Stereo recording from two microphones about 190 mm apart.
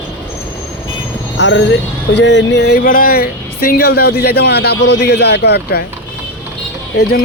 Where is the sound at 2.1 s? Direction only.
70° left (ahead or behind).